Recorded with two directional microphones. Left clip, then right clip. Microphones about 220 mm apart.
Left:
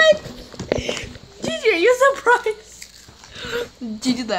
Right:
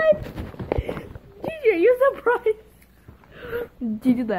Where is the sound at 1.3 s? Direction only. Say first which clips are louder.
Left 2 dB; centre (ahead or behind).